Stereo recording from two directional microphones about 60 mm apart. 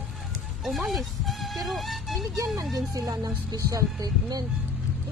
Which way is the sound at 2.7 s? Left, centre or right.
Right.